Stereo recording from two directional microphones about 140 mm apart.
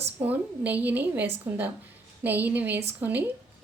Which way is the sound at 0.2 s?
10° right (ahead or behind).